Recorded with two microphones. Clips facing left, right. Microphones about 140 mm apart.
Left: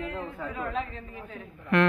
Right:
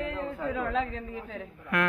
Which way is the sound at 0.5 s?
90° right.